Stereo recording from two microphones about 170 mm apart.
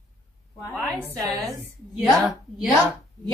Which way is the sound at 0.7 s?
5° left (ahead or behind).